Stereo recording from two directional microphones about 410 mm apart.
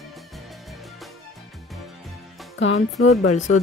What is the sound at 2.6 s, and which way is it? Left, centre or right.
Speech, left.